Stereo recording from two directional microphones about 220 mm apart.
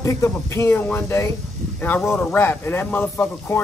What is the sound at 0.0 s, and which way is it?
A man's voice, 15° left (ahead or behind).